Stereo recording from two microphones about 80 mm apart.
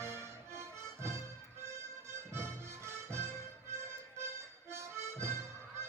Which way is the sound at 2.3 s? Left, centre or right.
Right.